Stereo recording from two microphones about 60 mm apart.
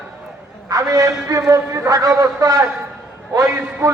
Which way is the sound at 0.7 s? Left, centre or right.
Right.